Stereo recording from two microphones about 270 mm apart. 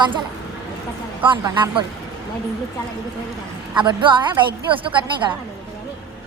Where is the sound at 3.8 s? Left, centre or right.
Centre.